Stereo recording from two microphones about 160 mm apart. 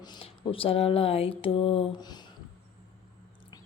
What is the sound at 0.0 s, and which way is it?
Mantra, 30° left (ahead or behind).